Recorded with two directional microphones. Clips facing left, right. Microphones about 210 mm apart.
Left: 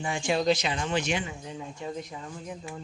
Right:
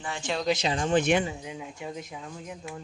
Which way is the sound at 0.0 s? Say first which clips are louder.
Left 4 dB; 10° left (ahead or behind).